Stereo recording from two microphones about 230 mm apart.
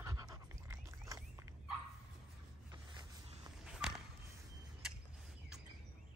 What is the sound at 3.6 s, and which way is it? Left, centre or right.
Walk, centre.